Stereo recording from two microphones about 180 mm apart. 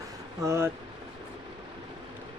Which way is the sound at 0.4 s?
15° right (ahead or behind).